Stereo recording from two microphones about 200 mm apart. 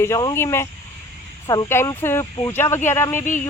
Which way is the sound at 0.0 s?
15° left (ahead or behind).